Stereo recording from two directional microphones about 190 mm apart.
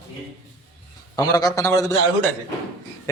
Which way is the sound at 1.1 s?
20° left (ahead or behind).